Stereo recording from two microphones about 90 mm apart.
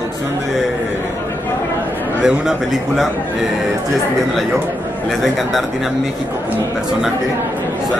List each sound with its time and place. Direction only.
2.2 s speech: 5° right (ahead or behind)